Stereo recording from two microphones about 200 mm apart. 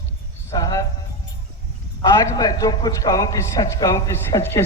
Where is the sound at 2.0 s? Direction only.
20° left (ahead or behind).